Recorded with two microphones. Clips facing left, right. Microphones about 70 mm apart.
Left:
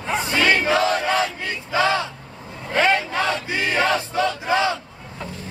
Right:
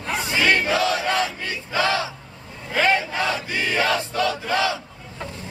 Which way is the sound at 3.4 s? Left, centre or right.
Left.